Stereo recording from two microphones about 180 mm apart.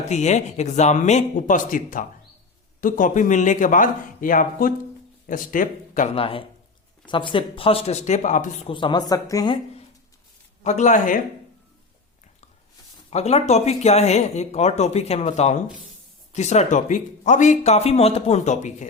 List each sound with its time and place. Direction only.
0.1 s a man's voice: 40° left (ahead or behind)
6.1 s speech: 30° left (ahead or behind)
8.7 s a woman's voice: 25° left (ahead or behind)
10.6 s a man's voice: 40° left (ahead or behind)
13.1 s speech: 35° left (ahead or behind)